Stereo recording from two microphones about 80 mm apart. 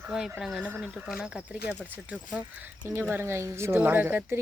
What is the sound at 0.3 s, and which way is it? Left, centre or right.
Speech, centre.